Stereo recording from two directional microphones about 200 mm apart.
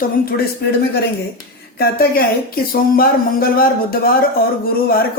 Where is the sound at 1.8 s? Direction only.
50° left (ahead or behind).